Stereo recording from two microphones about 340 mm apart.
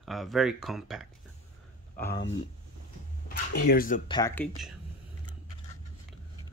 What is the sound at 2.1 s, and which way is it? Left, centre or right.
Speech, left.